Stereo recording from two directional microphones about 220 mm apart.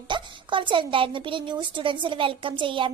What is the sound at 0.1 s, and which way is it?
A child's voice, 20° right (ahead or behind).